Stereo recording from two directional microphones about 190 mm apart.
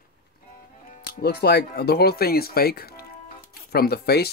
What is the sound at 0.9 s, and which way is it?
Speech, 55° left (ahead or behind).